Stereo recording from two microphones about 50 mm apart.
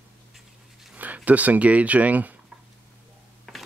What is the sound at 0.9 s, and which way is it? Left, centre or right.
Speech, right.